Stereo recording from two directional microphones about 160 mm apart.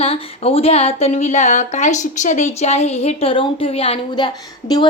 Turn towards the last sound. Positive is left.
turn(degrees=30)  # may be behind; listen again after turning